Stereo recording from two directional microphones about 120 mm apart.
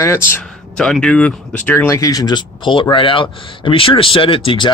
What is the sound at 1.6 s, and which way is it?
Speech, 20° left (ahead or behind).